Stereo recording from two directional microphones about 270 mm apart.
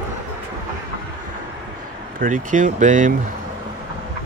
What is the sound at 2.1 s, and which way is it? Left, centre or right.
Speech, right.